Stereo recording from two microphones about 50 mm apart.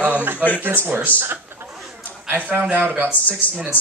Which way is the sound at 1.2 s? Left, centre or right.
Right.